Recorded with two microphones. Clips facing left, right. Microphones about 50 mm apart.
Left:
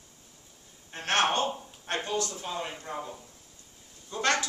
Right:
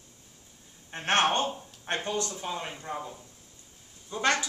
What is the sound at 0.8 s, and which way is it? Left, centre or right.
A man's voice, right.